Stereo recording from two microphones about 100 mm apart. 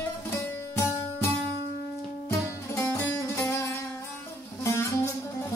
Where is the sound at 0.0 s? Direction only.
25° left (ahead or behind).